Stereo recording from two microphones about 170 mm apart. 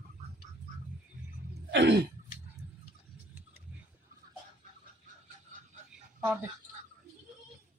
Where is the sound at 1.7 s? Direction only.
90° right.